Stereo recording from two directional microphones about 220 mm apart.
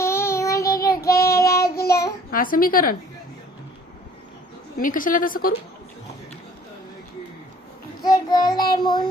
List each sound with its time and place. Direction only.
0.0 s child singing: 10° left (ahead or behind)
1.7 s child singing: 45° left (ahead or behind)
2.3 s a woman's voice: 40° left (ahead or behind)
4.8 s a woman's voice: 40° left (ahead or behind)
8.0 s child singing: 15° left (ahead or behind)